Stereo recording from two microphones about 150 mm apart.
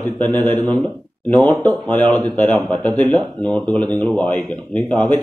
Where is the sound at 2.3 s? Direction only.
5° left (ahead or behind).